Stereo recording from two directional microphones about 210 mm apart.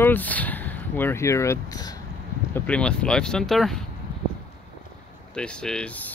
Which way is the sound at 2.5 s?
5° left (ahead or behind).